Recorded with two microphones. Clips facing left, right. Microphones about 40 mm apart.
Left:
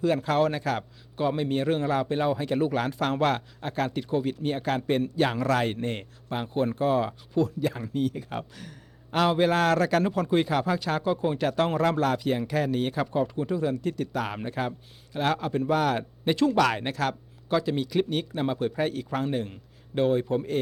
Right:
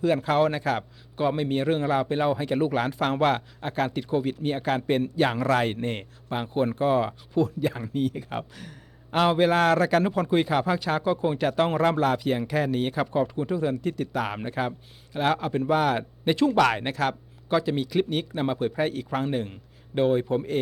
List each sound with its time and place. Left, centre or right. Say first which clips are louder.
0.0 s a man's voice: right 2 dB; centre